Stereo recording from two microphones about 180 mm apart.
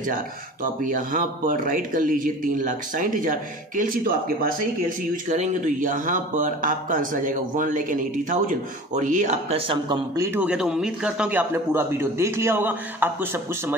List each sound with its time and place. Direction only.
0.9 s a man's voice: 50° right (ahead or behind)
9.7 s a man's voice: 25° right (ahead or behind)
10.3 s a man's voice: 5° right (ahead or behind)